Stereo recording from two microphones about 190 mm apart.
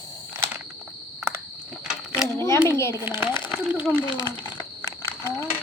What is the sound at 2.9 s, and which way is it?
A child's voice, 10° right (ahead or behind).